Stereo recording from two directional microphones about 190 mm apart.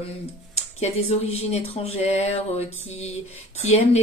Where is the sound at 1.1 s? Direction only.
35° left (ahead or behind).